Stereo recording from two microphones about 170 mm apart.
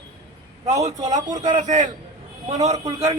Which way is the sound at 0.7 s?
20° right (ahead or behind).